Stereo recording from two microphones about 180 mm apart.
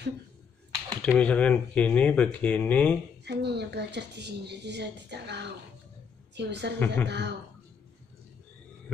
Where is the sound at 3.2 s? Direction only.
70° right (ahead or behind).